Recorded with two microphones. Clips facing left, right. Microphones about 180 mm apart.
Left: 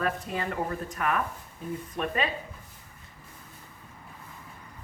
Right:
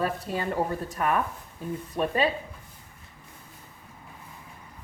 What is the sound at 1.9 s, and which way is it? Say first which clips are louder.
Speech: right 5 dB; 35° right (ahead or behind).